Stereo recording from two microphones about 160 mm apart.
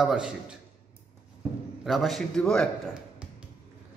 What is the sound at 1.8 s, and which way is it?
Speech, centre (ahead or behind).